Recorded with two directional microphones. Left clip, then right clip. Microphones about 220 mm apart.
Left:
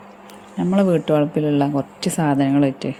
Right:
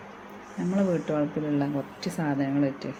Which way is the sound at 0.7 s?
40° left (ahead or behind).